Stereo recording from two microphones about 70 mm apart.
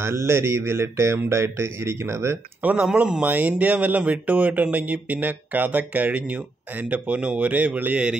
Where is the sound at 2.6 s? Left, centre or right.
Centre.